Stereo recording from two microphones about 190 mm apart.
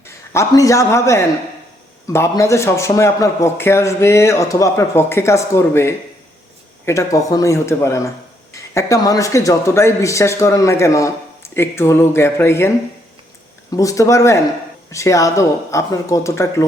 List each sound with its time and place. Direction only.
0.3 s a man's voice: 15° left (ahead or behind)